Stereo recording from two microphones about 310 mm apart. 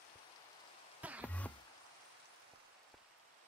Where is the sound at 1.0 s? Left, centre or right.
Centre.